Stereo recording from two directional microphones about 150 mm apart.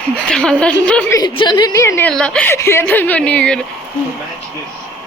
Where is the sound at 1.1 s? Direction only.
30° left (ahead or behind); by 3.5 s 10° left (ahead or behind).